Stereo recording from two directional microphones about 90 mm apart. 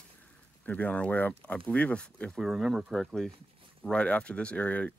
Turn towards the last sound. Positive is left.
turn(degrees=15)  # may be behind; listen again after turning